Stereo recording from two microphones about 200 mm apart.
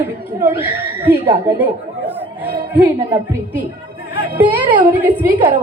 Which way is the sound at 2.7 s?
10° right (ahead or behind).